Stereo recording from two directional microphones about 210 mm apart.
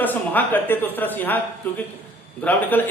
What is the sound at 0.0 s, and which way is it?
A man's voice, 10° left (ahead or behind).